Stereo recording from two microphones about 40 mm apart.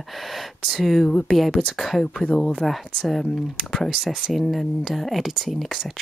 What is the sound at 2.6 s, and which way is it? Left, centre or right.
Speech, centre.